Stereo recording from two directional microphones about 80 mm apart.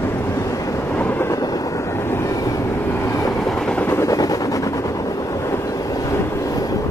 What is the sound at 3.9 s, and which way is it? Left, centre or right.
Helicopter, left.